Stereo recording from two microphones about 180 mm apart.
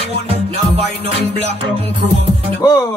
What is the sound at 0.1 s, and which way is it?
Music, 35° right (ahead or behind).